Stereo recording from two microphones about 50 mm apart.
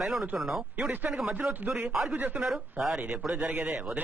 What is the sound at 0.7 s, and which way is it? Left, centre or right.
Speech, right.